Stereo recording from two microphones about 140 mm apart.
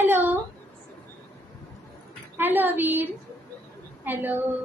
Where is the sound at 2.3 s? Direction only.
15° right (ahead or behind).